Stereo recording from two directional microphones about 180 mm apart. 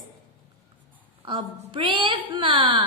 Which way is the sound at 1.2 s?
25° right (ahead or behind).